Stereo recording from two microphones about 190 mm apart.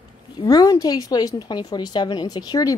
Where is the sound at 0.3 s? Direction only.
20° left (ahead or behind).